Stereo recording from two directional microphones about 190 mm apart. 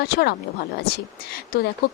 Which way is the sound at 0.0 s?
55° left (ahead or behind).